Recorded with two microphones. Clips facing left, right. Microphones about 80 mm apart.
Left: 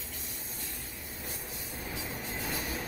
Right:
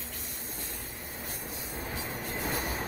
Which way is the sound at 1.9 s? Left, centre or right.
Right.